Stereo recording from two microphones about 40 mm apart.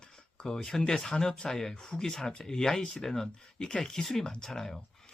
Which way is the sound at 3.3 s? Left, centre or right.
Left.